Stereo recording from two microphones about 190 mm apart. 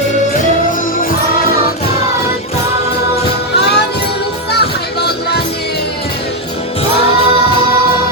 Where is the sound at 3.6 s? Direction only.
60° left (ahead or behind).